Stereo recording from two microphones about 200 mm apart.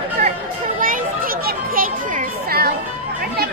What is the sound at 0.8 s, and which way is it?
Children playing, 45° right (ahead or behind).